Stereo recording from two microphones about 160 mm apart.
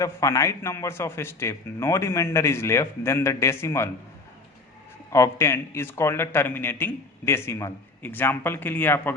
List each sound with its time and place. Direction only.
0.0 s speech: 20° left (ahead or behind)
5.1 s speech: 15° left (ahead or behind)